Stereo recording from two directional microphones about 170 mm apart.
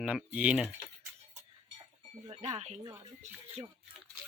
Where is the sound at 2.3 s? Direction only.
40° right (ahead or behind).